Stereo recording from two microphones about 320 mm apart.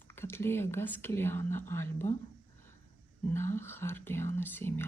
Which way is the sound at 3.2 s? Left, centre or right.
Centre.